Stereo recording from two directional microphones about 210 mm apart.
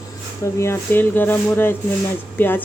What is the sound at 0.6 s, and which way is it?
Speech, 10° left (ahead or behind).